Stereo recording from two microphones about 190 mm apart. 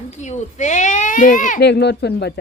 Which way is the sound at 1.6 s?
60° left (ahead or behind).